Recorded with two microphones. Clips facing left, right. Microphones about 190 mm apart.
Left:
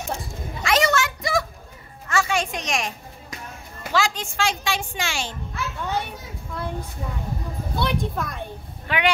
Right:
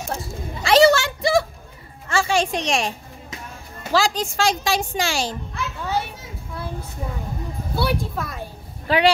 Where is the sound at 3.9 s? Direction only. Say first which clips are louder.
Right 4 dB; 35° right (ahead or behind).